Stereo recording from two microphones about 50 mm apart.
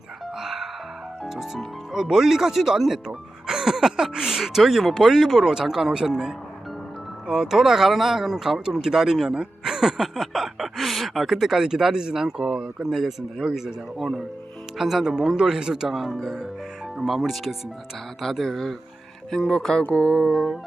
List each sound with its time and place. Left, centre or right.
0.3 s music: centre
1.2 s speech: centre
7.3 s speech: centre
15.9 s speech: centre
19.9 s music: left
20.2 s speech: centre